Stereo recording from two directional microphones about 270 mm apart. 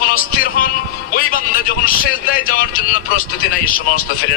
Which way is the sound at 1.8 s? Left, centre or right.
Left.